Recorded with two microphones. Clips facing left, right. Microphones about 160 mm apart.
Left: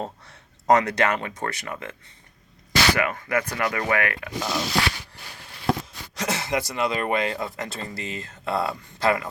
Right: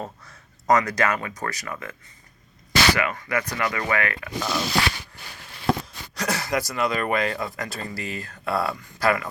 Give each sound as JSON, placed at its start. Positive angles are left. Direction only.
{"t": 0.3, "sound": "speech", "side_deg": 30}
{"t": 2.9, "sound": "speech", "side_deg": 50}
{"t": 4.3, "sound": "speech", "side_deg": 0}
{"t": 6.1, "sound": "speech", "side_deg": 25}